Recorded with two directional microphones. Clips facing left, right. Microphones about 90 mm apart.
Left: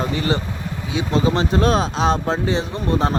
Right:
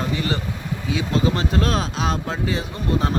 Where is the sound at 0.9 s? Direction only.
25° left (ahead or behind).